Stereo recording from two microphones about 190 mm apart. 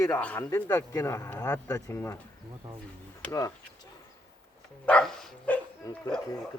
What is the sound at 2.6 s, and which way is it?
Speech, 20° right (ahead or behind).